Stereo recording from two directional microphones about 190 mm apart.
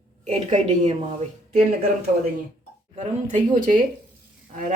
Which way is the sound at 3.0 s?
40° right (ahead or behind).